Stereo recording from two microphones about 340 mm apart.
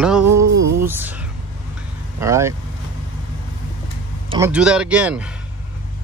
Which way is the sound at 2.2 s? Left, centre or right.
Centre.